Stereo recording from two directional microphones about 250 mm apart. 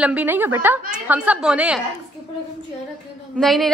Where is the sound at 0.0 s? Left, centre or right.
Centre.